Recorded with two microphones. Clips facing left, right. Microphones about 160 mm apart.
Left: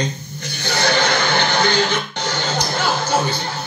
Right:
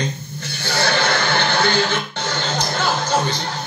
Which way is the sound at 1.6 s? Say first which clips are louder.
Left 1 dB; 15° left (ahead or behind).